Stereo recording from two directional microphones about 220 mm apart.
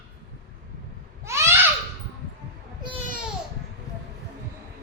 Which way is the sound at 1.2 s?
10° right (ahead or behind).